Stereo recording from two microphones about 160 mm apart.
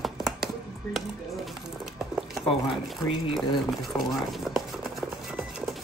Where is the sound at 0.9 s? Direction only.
Centre (ahead or behind).